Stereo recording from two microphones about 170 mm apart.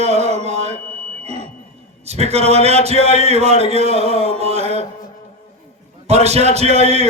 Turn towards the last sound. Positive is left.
turn(degrees=-40)  # may be behind; listen again after turning